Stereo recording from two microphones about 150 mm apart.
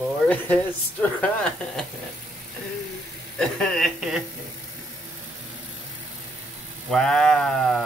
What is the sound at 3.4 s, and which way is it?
Speech, centre (ahead or behind).